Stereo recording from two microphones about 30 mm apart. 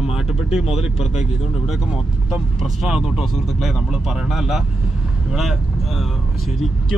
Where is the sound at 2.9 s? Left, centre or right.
Centre.